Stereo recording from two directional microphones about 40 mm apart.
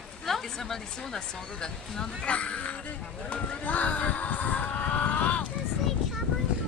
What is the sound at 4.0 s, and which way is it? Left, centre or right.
Speech, left.